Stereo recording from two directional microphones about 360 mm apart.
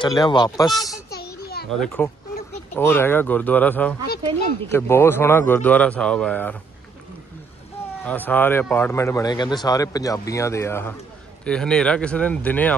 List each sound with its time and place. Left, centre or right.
0.0 s speech: centre
1.1 s children playing: left
1.7 s speech: centre
8.0 s speech: centre